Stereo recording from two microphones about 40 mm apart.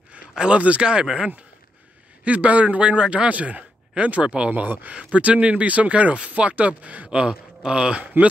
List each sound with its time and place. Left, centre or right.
0.3 s a sound: right
0.6 s a man's voice: right
1.0 s speech: centre
2.2 s a man's voice: right
4.5 s speech: right
4.9 s a man's voice: right
7.1 s speech: right